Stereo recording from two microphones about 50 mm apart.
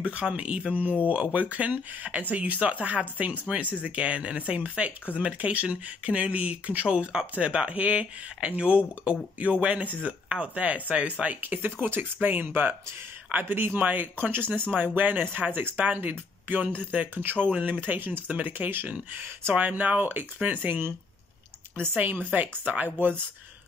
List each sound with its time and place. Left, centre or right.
0.0 s speech: right
14.7 s speech: right
17.7 s speech: right
21.9 s speech: right